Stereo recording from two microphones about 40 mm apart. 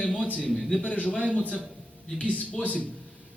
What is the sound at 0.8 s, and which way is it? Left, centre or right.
A man's voice, left.